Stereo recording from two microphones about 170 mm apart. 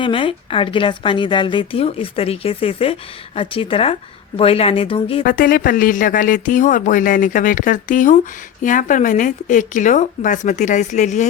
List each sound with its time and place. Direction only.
0.0 s a woman's voice: 30° left (ahead or behind)
5.2 s speech: 55° left (ahead or behind)